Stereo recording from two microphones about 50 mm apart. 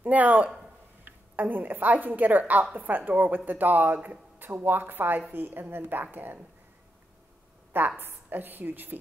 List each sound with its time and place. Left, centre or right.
0.0 s a woman's voice: right
8.0 s speech: right